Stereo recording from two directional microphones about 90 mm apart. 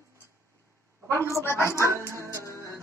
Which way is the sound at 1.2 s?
30° left (ahead or behind).